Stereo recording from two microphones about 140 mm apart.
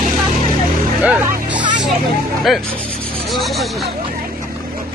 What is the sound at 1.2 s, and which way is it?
Music, 10° right (ahead or behind).